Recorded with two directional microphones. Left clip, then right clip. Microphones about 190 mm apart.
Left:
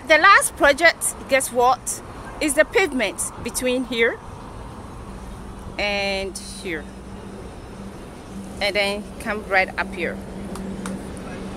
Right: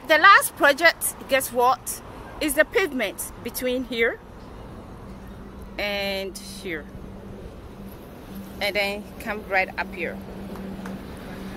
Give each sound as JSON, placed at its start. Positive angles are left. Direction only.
{"t": 0.1, "sound": "speech", "side_deg": 0}
{"t": 5.8, "sound": "speech", "side_deg": 0}
{"t": 8.5, "sound": "speech", "side_deg": 0}